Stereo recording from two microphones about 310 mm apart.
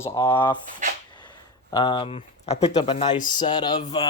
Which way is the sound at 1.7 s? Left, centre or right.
Centre.